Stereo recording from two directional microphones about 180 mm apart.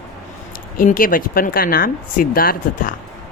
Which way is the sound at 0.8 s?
50° left (ahead or behind).